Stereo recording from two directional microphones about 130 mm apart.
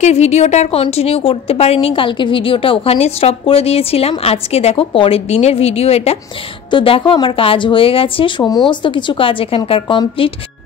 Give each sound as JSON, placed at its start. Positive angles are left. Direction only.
{"t": 0.0, "sound": "a woman's voice", "side_deg": 60}
{"t": 6.7, "sound": "a woman's voice", "side_deg": 40}
{"t": 8.5, "sound": "a woman's voice", "side_deg": 35}